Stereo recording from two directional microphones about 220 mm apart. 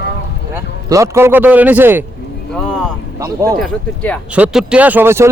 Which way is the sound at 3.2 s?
15° right (ahead or behind).